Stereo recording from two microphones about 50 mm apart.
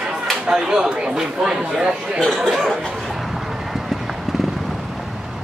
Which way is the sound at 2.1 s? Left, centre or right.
Centre.